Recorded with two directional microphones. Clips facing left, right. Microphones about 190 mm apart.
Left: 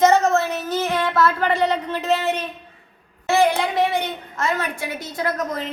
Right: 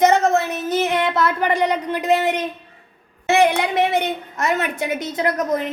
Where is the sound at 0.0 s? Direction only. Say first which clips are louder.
Even; 20° right (ahead or behind).